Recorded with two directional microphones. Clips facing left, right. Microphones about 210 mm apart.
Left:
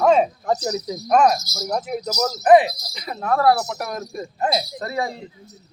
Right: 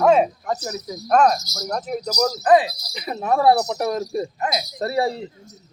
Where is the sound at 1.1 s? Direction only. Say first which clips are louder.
Even; 5° left (ahead or behind).